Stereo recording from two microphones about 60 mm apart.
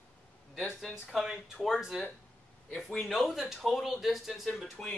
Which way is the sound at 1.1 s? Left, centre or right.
Centre.